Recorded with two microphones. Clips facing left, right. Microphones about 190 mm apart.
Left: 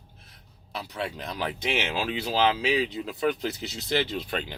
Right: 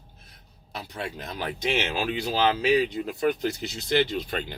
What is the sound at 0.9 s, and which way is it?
Speech, 45° right (ahead or behind).